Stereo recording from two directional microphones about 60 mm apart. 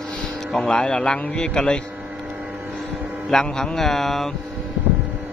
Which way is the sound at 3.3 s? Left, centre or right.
Centre.